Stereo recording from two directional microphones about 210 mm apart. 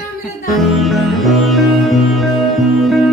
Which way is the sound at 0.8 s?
Centre (ahead or behind).